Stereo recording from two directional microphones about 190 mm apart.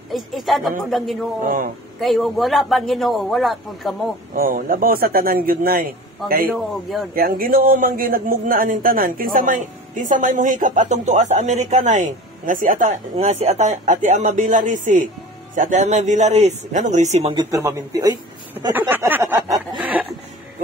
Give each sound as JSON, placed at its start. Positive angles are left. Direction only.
{"t": 0.1, "sound": "a man's voice", "side_deg": 0}
{"t": 4.4, "sound": "speech", "side_deg": -45}
{"t": 6.5, "sound": "a man's voice", "side_deg": 0}
{"t": 7.2, "sound": "a man's voice", "side_deg": -50}
{"t": 18.7, "sound": "a sound", "side_deg": -10}
{"t": 19.8, "sound": "snicker", "side_deg": -5}